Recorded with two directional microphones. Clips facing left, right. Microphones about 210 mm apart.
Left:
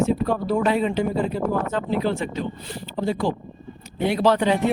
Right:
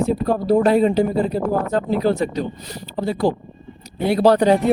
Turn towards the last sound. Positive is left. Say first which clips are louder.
# right 5 dB
turn(degrees=-40)  # may be behind; listen again after turning